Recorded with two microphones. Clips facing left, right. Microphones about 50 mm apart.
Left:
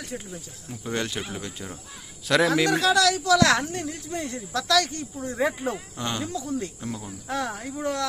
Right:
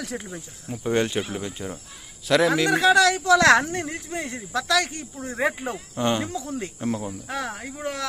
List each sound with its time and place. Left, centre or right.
0.7 s speech: right
1.2 s speech: centre
2.2 s a man's voice: centre
2.7 s speech: right
4.2 s speech: right
4.5 s speech: centre
6.3 s speech: right
7.3 s speech: centre